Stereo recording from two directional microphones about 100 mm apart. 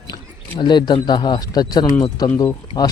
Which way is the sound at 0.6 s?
50° left (ahead or behind).